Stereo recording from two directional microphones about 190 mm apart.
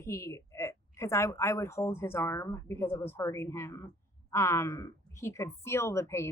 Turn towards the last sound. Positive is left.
turn(degrees=15)  # may be behind; listen again after turning